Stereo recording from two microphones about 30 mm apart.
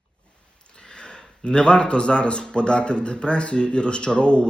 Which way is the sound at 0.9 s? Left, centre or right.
Left.